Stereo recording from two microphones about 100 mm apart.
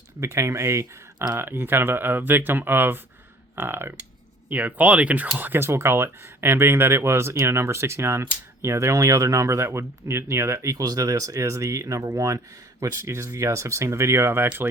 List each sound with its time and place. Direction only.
0.2 s speech: 30° right (ahead or behind)